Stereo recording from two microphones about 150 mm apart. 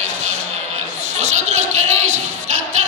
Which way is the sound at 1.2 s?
50° right (ahead or behind).